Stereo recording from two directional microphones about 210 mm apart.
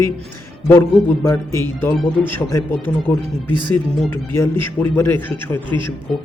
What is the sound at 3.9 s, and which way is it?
Speech, 5° left (ahead or behind).